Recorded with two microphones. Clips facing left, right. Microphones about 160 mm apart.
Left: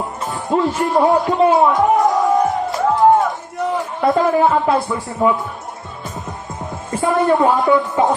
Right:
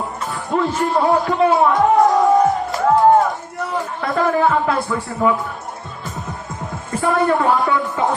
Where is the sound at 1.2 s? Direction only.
20° left (ahead or behind).